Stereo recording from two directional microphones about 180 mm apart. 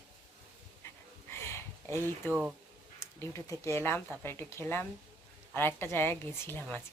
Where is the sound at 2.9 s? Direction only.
15° left (ahead or behind).